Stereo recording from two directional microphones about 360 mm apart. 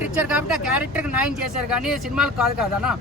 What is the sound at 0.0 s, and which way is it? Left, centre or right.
Speech, centre.